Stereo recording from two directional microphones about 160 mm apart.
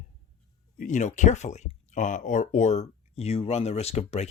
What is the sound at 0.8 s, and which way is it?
Speech, 50° left (ahead or behind).